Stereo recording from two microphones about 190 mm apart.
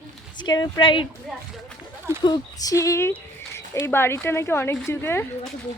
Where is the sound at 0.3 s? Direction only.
20° left (ahead or behind).